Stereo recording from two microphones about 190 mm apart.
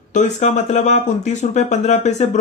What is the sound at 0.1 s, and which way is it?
Speech, 40° left (ahead or behind).